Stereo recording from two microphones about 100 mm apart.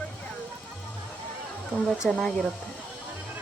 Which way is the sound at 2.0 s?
5° left (ahead or behind).